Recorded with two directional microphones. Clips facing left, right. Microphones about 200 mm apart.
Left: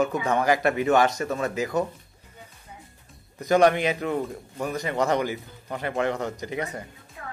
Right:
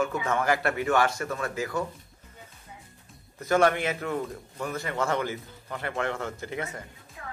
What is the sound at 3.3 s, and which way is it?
Speech, 15° left (ahead or behind).